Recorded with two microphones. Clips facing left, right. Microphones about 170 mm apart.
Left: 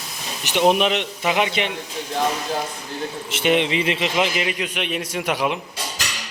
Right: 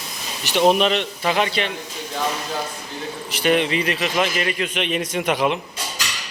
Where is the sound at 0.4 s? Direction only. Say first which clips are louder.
Right 1 dB; 15° left (ahead or behind).